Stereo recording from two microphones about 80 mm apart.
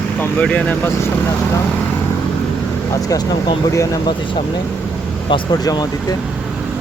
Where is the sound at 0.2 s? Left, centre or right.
Left.